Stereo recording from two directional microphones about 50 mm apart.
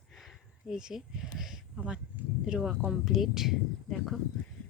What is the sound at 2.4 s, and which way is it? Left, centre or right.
Speech, centre.